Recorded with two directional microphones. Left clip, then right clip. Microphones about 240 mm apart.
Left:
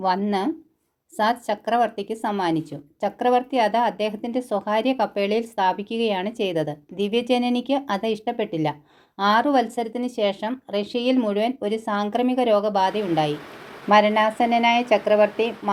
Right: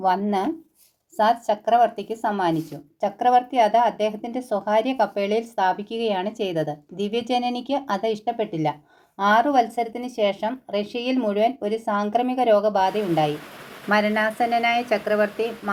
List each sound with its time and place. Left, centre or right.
0.0 s speech: left